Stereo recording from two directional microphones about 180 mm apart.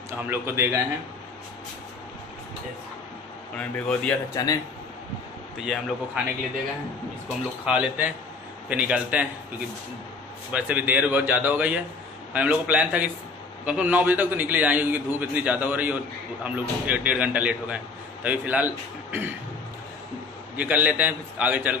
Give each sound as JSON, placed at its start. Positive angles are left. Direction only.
{"t": 0.3, "sound": "a man's voice", "side_deg": -15}
{"t": 3.5, "sound": "speech", "side_deg": 5}
{"t": 4.3, "sound": "speech", "side_deg": 20}
{"t": 5.6, "sound": "a man's voice", "side_deg": -5}
{"t": 7.2, "sound": "a man's voice", "side_deg": -5}
{"t": 10.5, "sound": "a man's voice", "side_deg": -10}
{"t": 20.5, "sound": "a man's voice", "side_deg": -10}